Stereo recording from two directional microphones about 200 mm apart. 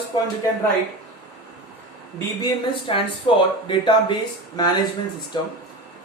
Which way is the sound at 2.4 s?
25° left (ahead or behind).